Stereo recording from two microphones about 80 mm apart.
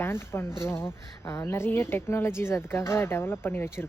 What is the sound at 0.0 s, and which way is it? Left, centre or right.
Speech, left.